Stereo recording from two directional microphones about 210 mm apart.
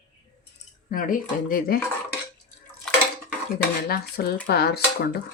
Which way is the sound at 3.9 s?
45° left (ahead or behind).